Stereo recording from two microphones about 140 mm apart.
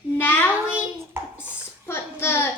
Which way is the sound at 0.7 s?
10° right (ahead or behind).